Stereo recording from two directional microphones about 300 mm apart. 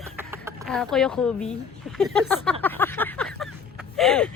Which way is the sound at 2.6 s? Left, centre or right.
Centre.